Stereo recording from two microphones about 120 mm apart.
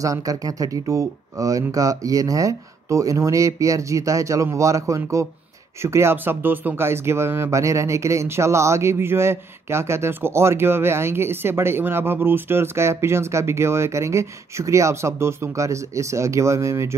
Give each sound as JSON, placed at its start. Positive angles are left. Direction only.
{"t": 0.0, "sound": "speech", "side_deg": -30}